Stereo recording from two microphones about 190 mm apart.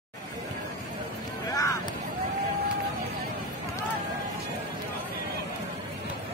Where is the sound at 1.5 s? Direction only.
15° left (ahead or behind).